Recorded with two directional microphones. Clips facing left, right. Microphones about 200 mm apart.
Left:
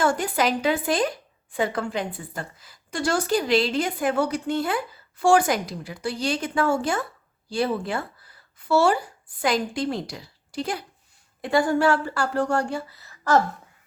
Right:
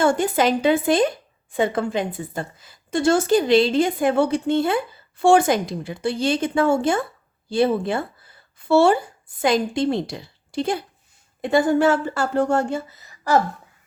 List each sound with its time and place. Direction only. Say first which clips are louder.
0.0 s a woman's voice: right 4 dB; 25° right (ahead or behind)